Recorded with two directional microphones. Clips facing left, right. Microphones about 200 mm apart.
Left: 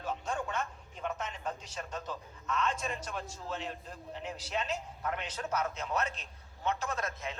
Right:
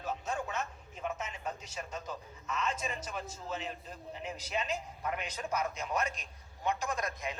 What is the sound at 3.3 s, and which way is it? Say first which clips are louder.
A man's voice: even; 5° right (ahead or behind).